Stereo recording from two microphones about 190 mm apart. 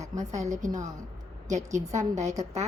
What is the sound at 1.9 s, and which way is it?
Speech, 40° right (ahead or behind).